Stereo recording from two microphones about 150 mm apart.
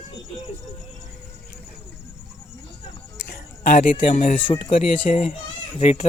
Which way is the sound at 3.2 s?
85° left.